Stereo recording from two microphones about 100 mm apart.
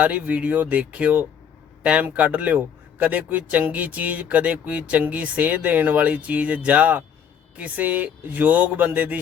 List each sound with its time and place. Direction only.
0.0 s speech: 15° right (ahead or behind)